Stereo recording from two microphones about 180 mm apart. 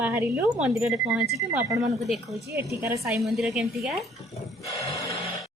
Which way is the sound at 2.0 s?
Centre (ahead or behind).